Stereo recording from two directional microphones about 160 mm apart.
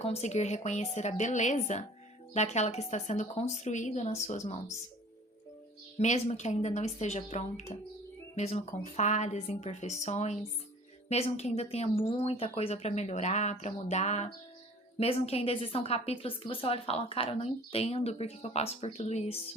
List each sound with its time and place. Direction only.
0.0 s speech: 40° left (ahead or behind)
6.0 s a woman's voice: 45° left (ahead or behind)